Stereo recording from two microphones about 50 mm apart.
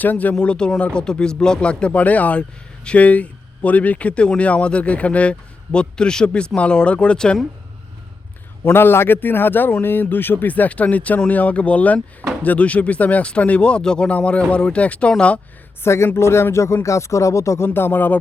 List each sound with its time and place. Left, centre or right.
0.0 s speech: left
0.3 s speech: centre
1.9 s speech: left
8.7 s a man's voice: left
15.8 s speech: left
17.7 s speech: left